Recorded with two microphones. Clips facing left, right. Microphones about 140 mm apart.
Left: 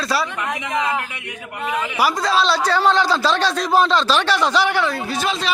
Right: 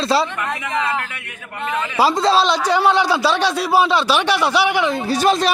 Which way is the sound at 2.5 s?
15° right (ahead or behind).